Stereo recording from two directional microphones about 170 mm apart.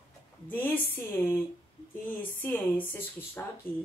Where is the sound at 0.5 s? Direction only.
10° left (ahead or behind).